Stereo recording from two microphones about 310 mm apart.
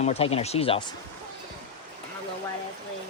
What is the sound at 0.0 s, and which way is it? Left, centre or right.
Speech, centre.